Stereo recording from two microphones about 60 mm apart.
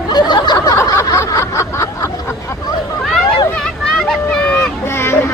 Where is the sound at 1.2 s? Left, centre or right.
Left.